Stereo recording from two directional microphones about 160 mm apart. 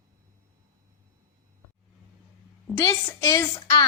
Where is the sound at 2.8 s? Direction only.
20° left (ahead or behind).